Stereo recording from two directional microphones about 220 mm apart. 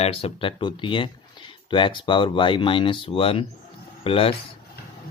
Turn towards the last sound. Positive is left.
turn(degrees=25)  # may be behind; listen again after turning